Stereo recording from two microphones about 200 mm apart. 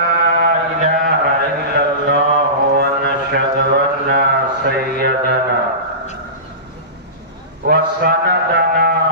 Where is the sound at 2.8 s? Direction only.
55° right (ahead or behind).